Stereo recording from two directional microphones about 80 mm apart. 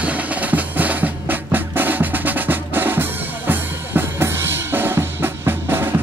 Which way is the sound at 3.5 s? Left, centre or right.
Right.